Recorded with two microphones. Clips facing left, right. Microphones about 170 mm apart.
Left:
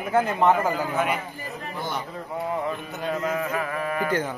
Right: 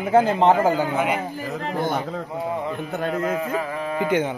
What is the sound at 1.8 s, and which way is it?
Speech, 50° right (ahead or behind).